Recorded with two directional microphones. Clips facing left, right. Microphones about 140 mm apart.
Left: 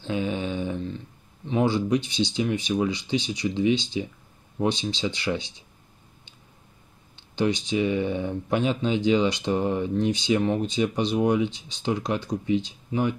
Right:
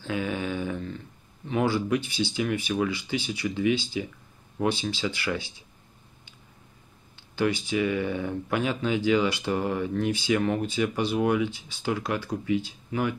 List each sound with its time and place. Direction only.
0.0 s a sound: 25° left (ahead or behind)
1.5 s speech: 20° left (ahead or behind)
7.3 s speech: 20° left (ahead or behind)